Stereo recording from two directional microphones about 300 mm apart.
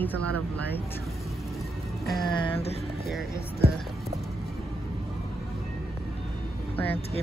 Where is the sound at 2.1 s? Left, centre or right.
Centre.